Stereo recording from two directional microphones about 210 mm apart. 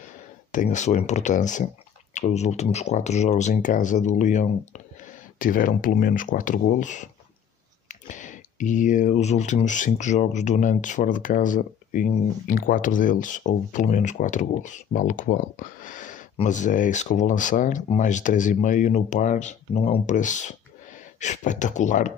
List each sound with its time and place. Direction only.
0.5 s speech: 35° left (ahead or behind)